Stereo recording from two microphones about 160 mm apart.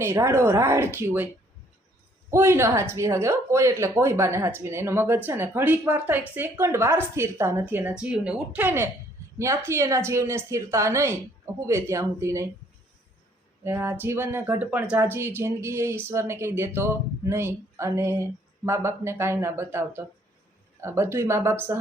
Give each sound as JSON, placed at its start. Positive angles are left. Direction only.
{"t": 0.0, "sound": "speech", "side_deg": -15}
{"t": 2.3, "sound": "speech", "side_deg": -15}
{"t": 13.7, "sound": "speech", "side_deg": -15}